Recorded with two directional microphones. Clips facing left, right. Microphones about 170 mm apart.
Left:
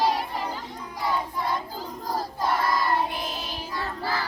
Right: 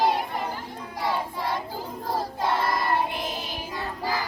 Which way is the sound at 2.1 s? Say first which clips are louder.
Right 1 dB; 25° right (ahead or behind).